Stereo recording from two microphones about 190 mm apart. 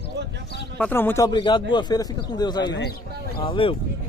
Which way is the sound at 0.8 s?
10° left (ahead or behind).